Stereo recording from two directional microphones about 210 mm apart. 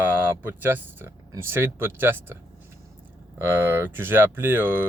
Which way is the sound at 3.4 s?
10° right (ahead or behind).